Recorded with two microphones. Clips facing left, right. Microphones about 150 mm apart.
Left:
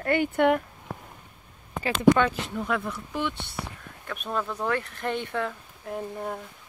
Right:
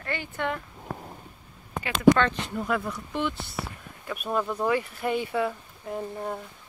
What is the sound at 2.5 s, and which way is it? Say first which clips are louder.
Speech: even; centre (ahead or behind).